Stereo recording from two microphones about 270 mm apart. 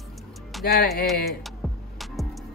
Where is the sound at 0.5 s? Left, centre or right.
Centre.